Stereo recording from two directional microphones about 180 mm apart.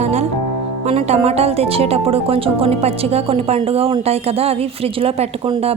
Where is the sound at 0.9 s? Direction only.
35° right (ahead or behind).